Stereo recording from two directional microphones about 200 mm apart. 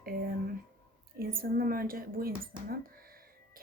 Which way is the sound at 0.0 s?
50° right (ahead or behind).